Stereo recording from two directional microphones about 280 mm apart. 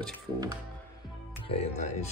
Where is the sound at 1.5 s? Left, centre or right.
Left.